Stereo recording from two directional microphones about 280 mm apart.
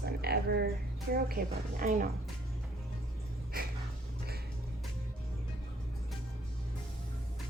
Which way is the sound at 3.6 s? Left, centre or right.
Right.